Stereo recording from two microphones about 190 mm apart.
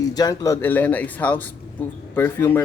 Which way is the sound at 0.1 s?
20° left (ahead or behind).